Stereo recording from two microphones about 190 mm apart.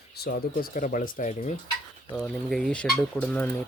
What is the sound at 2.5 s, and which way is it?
Speech, 5° left (ahead or behind).